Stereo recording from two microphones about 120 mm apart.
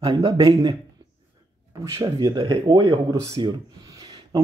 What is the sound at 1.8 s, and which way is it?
Speech, 30° right (ahead or behind).